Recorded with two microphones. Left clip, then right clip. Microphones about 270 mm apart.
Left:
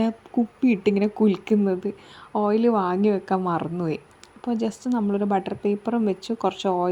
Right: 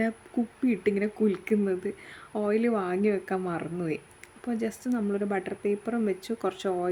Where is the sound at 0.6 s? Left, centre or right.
Centre.